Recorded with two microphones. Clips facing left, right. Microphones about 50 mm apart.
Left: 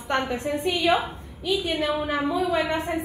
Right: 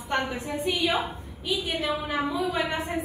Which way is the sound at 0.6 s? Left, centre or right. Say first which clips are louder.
Even; left.